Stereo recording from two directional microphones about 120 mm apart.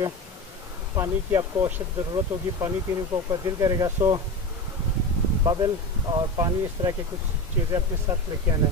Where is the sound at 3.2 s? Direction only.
30° right (ahead or behind).